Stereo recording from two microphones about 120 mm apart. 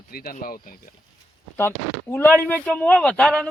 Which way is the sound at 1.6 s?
15° left (ahead or behind).